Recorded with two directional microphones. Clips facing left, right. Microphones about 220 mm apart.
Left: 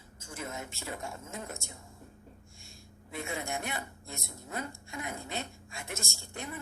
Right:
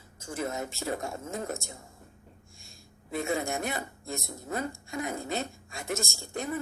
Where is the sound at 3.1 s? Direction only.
40° right (ahead or behind).